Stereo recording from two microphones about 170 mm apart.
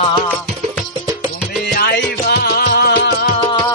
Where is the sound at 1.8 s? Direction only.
70° left (ahead or behind).